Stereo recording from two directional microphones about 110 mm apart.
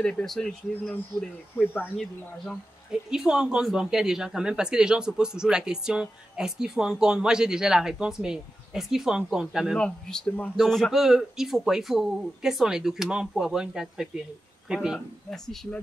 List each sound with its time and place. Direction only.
0.0 s a man's voice: 5° left (ahead or behind)
1.6 s speech: 20° left (ahead or behind)
2.0 s a man's voice: 5° left (ahead or behind)